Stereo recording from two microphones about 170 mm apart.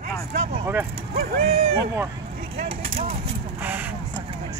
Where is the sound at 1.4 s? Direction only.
40° right (ahead or behind).